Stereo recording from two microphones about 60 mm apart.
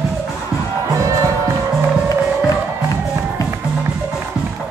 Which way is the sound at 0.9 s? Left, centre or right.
Right.